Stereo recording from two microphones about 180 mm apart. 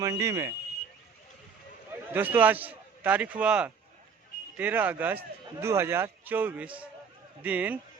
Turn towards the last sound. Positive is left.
turn(degrees=-10)  # may be behind; listen again after turning